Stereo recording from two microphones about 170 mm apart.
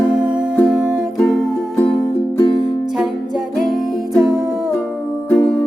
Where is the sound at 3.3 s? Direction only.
Centre (ahead or behind).